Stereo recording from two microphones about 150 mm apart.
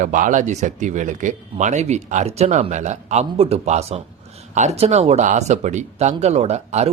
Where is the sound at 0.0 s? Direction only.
60° right (ahead or behind).